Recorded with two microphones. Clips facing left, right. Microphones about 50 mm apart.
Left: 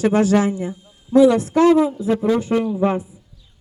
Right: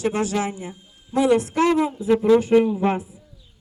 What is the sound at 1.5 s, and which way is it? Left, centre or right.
A man's voice, right.